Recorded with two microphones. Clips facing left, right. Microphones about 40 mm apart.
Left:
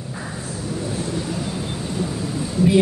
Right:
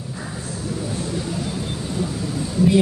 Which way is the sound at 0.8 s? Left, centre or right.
Centre.